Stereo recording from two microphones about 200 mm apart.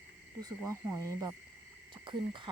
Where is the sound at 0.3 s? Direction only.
20° right (ahead or behind).